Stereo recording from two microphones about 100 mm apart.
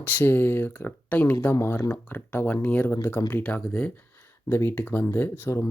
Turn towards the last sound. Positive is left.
turn(degrees=20)  # may be behind; listen again after turning